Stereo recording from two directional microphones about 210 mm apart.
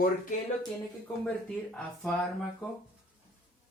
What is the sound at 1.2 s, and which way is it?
Speech, 5° left (ahead or behind).